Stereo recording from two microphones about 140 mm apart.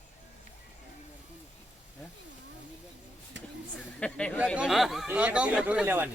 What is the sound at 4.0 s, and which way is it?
Speech, 10° left (ahead or behind).